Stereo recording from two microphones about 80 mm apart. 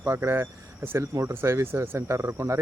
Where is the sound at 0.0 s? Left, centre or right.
Right.